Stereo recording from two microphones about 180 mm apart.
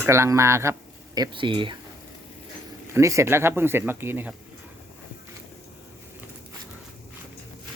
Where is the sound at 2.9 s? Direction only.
15° right (ahead or behind).